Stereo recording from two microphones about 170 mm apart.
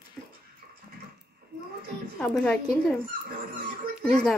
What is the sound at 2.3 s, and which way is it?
Speech, 5° left (ahead or behind).